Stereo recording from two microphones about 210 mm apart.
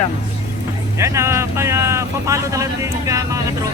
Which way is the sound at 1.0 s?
15° right (ahead or behind).